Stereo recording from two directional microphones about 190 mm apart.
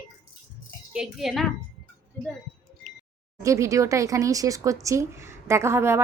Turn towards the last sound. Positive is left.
turn(degrees=-15)  # may be behind; listen again after turning